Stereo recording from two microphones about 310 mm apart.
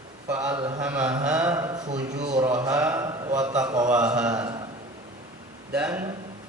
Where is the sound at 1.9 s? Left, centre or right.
Right.